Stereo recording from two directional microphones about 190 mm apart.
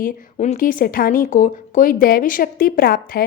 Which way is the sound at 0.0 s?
45° left (ahead or behind).